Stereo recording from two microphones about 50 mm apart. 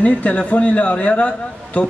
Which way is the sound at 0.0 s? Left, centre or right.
Left.